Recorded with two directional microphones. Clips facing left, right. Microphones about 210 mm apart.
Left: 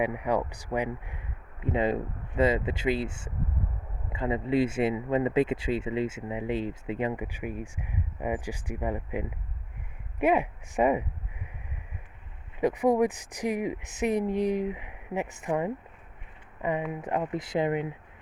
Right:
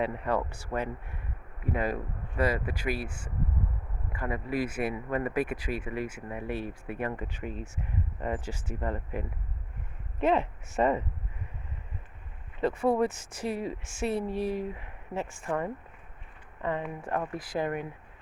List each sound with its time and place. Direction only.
0.0 s speech: 15° left (ahead or behind)
12.5 s speech: 15° left (ahead or behind)